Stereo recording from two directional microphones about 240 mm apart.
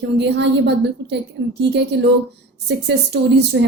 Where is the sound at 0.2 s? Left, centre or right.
Right.